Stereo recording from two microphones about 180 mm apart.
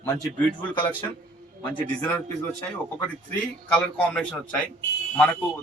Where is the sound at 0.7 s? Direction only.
25° left (ahead or behind).